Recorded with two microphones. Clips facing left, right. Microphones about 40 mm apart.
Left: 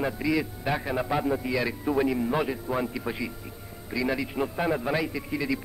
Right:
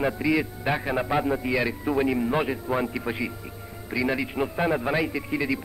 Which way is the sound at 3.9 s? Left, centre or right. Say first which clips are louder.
Right 2 dB; centre.